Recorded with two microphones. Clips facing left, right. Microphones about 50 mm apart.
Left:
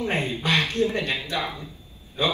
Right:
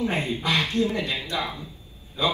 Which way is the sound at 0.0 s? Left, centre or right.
Left.